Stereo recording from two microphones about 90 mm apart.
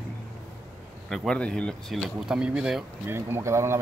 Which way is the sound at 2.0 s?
5° right (ahead or behind).